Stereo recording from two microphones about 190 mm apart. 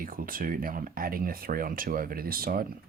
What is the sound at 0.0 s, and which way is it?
Speech, 50° right (ahead or behind).